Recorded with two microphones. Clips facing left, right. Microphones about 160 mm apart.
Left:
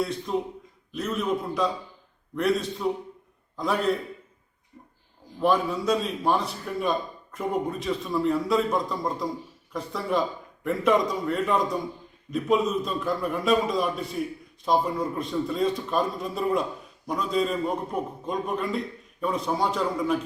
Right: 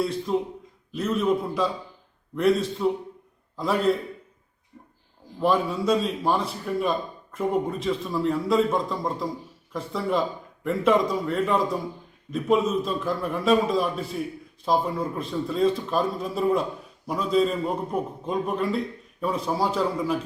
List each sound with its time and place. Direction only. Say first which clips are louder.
0.3 s a man's voice: right 3 dB; centre (ahead or behind)
2.8 s a man's voice: right 3 dB; centre (ahead or behind)
5.4 s a man's voice: even; centre (ahead or behind)